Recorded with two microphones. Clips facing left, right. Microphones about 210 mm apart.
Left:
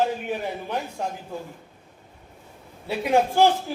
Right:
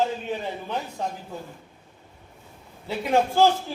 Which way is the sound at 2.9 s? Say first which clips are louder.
Left 1 dB; 15° left (ahead or behind).